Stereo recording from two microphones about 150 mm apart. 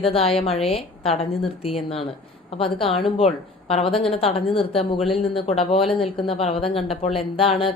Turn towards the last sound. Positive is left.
turn(degrees=40)  # may be behind; listen again after turning